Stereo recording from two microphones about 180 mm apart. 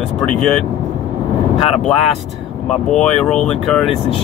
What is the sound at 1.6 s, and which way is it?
Speech, 35° left (ahead or behind).